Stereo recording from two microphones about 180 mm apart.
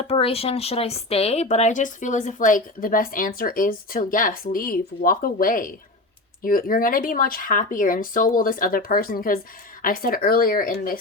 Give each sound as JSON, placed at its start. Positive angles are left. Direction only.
{"t": 0.0, "sound": "speech", "side_deg": 35}